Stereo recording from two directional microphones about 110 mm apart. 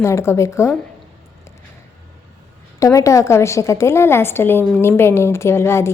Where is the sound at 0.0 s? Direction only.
25° left (ahead or behind).